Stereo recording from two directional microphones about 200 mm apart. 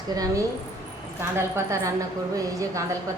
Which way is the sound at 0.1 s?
20° right (ahead or behind).